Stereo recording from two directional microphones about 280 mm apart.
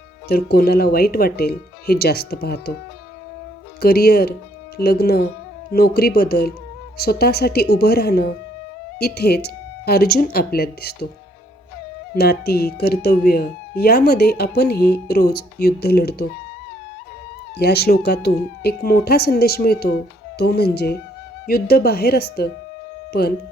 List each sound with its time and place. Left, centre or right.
0.3 s speech: left
3.8 s speech: left
12.1 s speech: left
17.6 s speech: left